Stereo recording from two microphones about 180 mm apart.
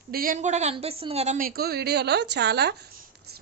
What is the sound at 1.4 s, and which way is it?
Speech, 55° right (ahead or behind).